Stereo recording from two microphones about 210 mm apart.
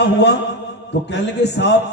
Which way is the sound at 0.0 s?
55° left (ahead or behind).